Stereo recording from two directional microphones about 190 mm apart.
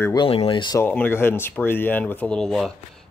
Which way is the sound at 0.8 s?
10° left (ahead or behind).